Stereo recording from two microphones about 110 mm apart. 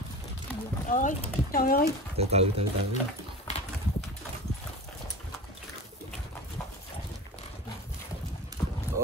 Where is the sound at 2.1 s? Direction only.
65° right (ahead or behind).